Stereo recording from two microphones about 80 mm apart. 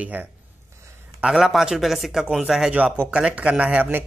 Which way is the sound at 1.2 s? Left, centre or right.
Centre.